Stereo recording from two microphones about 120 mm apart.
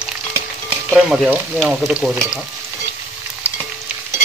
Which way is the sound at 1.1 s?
5° right (ahead or behind).